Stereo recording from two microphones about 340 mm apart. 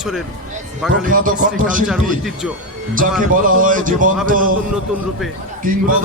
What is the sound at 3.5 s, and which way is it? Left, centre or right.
A man's voice, right.